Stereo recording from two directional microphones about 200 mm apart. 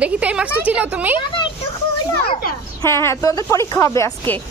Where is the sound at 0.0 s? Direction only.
5° right (ahead or behind).